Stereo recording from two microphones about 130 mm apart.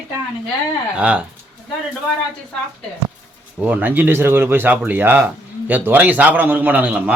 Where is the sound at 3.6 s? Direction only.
10° right (ahead or behind).